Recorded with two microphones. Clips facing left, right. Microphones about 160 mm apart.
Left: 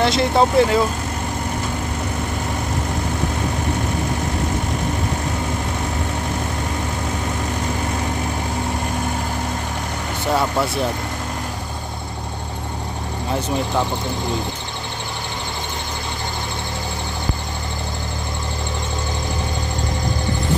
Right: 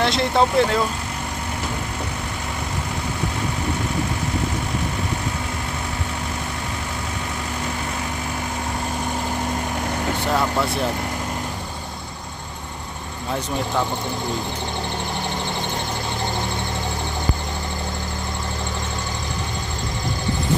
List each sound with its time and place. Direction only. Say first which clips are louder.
0.0 s speech: left 2 dB; centre (ahead or behind)